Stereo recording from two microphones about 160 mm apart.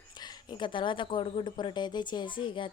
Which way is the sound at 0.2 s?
25° left (ahead or behind).